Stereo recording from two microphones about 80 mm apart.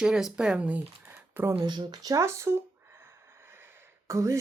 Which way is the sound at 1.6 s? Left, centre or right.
Right.